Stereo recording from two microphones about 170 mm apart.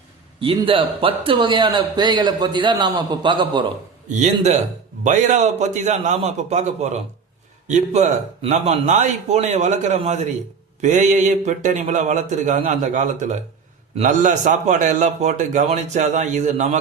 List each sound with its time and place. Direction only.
0.3 s a man's voice: 30° right (ahead or behind)
4.1 s a man's voice: 45° right (ahead or behind)